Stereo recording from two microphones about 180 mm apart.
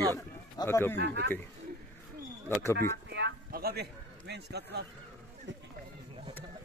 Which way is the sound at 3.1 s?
65° right (ahead or behind).